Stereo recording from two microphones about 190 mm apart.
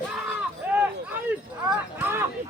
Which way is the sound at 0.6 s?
10° right (ahead or behind).